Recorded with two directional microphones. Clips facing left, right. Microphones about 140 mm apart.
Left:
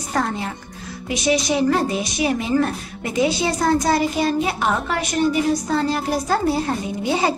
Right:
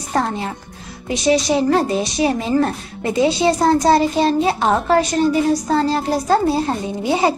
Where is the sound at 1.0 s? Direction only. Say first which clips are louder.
Right 4 dB; 35° right (ahead or behind).